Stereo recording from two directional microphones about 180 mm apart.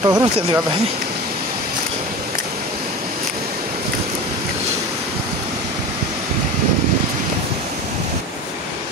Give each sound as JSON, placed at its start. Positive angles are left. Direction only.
{"t": 0.0, "sound": "speech", "side_deg": -20}